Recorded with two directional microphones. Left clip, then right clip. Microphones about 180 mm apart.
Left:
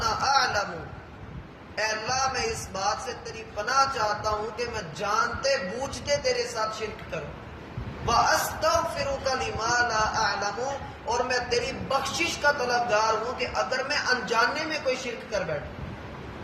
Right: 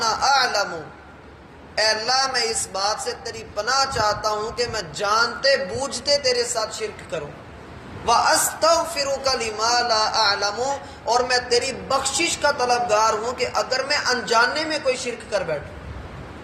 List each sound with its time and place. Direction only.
0.0 s a sound: 20° right (ahead or behind)
1.7 s a woman's voice: 25° right (ahead or behind)
8.6 s a woman's voice: 20° right (ahead or behind)